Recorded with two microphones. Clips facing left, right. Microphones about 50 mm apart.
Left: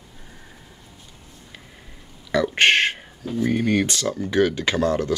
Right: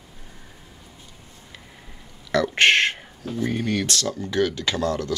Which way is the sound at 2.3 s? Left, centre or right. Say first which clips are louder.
Even; centre.